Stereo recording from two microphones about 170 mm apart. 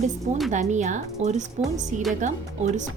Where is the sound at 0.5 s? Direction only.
45° right (ahead or behind).